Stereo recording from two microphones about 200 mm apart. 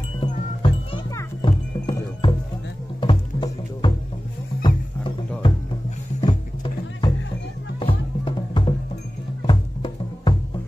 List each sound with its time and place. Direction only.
0.2 s music: 25° left (ahead or behind)
6.2 s music: 25° left (ahead or behind)